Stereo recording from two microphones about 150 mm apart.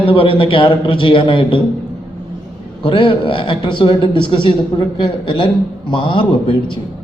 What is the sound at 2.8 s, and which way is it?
A man's voice, 35° left (ahead or behind).